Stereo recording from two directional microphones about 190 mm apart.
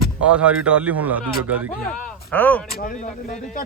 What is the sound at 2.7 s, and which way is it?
Speech, 50° left (ahead or behind).